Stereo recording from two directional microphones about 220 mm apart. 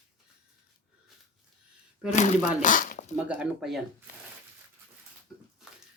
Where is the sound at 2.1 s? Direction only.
35° left (ahead or behind).